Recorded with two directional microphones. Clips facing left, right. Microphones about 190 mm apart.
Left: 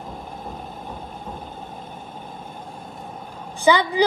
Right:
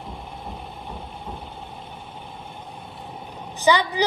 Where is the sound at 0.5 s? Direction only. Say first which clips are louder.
Left 1 dB; 45° left (ahead or behind).